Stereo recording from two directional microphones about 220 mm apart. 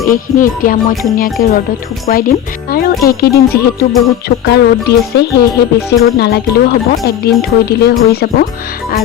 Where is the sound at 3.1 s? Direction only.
45° left (ahead or behind).